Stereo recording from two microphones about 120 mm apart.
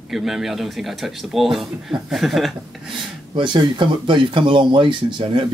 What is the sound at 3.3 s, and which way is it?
Speech, 40° right (ahead or behind).